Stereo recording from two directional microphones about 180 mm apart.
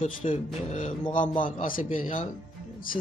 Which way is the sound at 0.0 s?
40° left (ahead or behind).